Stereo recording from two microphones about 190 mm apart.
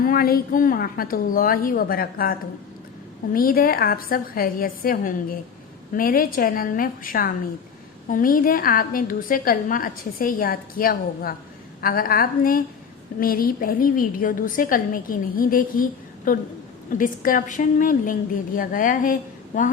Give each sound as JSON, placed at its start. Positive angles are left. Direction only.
{"t": 0.0, "sound": "a woman's voice", "side_deg": 50}